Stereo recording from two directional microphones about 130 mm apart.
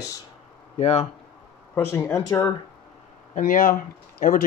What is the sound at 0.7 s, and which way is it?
Speech, 55° left (ahead or behind).